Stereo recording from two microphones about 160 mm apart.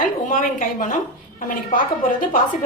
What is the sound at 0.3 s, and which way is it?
A woman's voice, 55° left (ahead or behind).